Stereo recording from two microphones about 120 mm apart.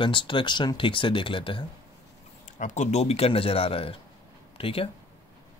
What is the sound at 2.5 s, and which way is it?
Speech, 85° left.